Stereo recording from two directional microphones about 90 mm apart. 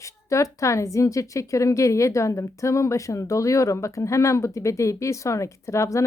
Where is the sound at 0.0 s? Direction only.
35° left (ahead or behind).